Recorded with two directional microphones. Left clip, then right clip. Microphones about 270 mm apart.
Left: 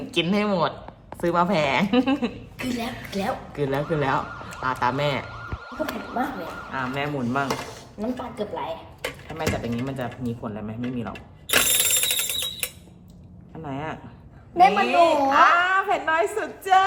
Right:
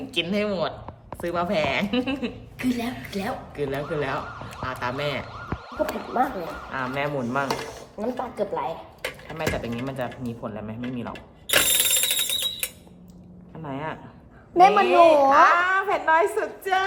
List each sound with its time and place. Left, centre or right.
0.1 s speech: centre
2.6 s speech: centre
3.5 s speech: centre
5.3 s siren: centre
6.7 s speech: centre
8.0 s speech: right
9.0 s a sound: centre
13.7 s speech: centre
14.5 s a woman's voice: right
15.4 s speech: centre